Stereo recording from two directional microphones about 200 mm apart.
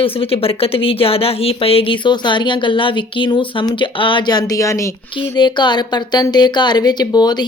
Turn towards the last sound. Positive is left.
turn(degrees=20)  # may be behind; listen again after turning